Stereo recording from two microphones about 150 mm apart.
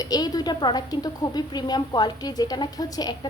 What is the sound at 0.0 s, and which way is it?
Speech, 25° left (ahead or behind).